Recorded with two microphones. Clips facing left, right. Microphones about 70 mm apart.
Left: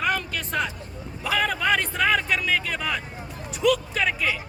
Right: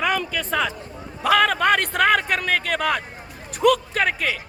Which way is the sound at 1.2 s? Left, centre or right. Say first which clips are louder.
Right 7 dB; right.